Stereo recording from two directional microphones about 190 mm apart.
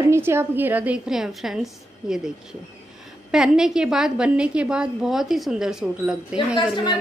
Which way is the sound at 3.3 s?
5° right (ahead or behind).